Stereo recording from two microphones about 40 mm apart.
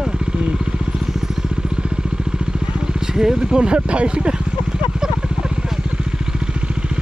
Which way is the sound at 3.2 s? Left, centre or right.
Centre.